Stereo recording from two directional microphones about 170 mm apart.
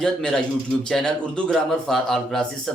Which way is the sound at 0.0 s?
5° left (ahead or behind).